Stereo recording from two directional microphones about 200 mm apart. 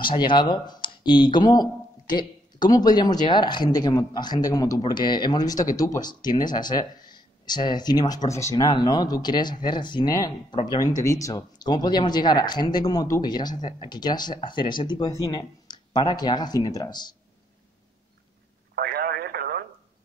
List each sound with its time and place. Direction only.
0.0 s speech: 25° left (ahead or behind)
18.8 s radio: 50° right (ahead or behind)